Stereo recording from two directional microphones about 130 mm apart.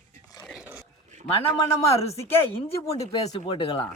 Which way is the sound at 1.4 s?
50° left (ahead or behind).